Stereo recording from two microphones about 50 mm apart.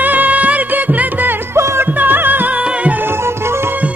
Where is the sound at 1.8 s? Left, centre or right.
Right.